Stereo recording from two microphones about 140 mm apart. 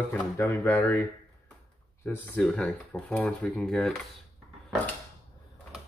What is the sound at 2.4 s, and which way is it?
Speech, 5° left (ahead or behind).